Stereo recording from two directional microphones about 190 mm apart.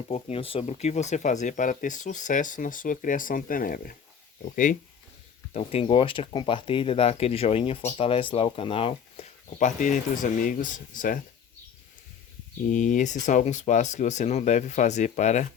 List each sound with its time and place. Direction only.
0.1 s speech: 30° left (ahead or behind)
5.5 s speech: 30° left (ahead or behind); by 11.2 s 45° left (ahead or behind)
12.6 s speech: 45° left (ahead or behind)